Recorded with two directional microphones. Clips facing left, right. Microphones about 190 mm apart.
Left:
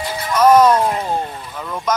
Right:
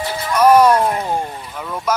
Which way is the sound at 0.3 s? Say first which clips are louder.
Even; 10° right (ahead or behind).